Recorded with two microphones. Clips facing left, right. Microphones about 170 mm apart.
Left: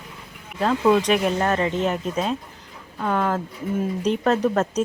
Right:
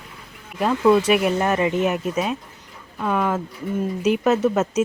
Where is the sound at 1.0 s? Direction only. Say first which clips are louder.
Right 2 dB; 5° right (ahead or behind).